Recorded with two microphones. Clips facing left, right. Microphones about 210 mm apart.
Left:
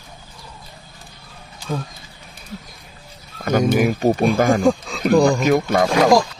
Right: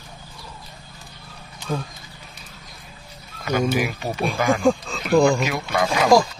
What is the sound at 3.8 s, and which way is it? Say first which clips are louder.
Speech: left 8 dB; 45° left (ahead or behind).